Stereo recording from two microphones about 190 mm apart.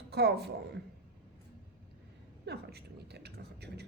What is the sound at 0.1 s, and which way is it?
Speech, 60° right (ahead or behind).